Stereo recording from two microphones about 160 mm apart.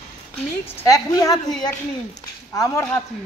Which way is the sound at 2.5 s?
20° left (ahead or behind).